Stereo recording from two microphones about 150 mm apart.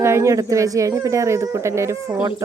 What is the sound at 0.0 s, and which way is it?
Speech, 15° right (ahead or behind).